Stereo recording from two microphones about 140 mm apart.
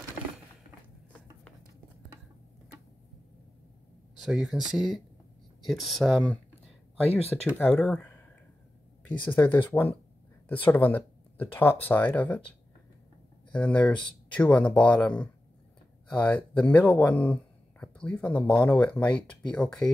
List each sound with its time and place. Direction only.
4.2 s speech: 5° right (ahead or behind)